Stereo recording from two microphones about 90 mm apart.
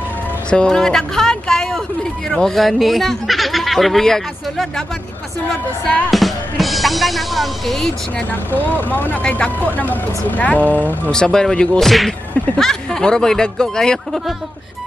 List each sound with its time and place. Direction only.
0.5 s a sound: 10° left (ahead or behind)
2.2 s speech: 5° left (ahead or behind)
6.0 s speech: centre (ahead or behind)
8.3 s speech: 20° left (ahead or behind)
11.1 s speech: 5° left (ahead or behind)